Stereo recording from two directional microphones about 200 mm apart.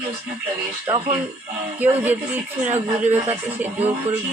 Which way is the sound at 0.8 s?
25° right (ahead or behind).